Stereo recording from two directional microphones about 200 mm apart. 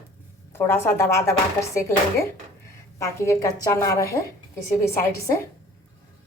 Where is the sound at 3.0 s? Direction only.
15° left (ahead or behind).